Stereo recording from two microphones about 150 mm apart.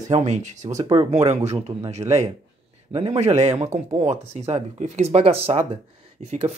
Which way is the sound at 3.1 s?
50° right (ahead or behind).